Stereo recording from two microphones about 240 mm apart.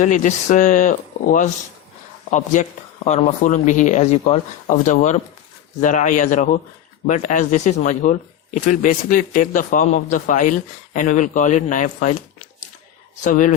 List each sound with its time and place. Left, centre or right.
0.3 s speech: left
13.2 s speech: left